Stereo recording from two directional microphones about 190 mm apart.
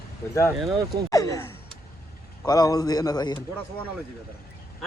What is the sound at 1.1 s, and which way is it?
A man's voice, 20° left (ahead or behind).